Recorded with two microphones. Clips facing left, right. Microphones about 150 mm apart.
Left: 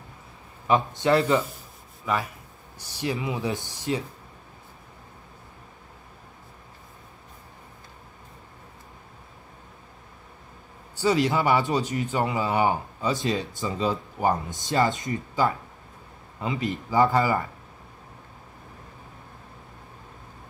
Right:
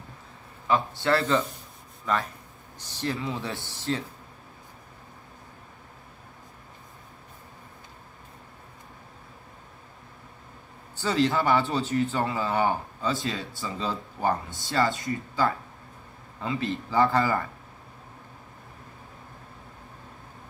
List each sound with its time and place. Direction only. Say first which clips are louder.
0.7 s speech: left 3 dB; 20° left (ahead or behind)
11.0 s speech: left 2 dB; 15° left (ahead or behind)